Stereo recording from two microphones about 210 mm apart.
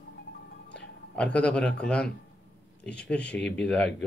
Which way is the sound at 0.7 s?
5° left (ahead or behind).